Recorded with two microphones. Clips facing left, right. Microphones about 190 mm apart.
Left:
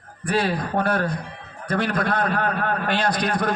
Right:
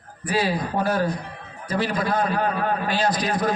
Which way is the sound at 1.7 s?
55° left (ahead or behind).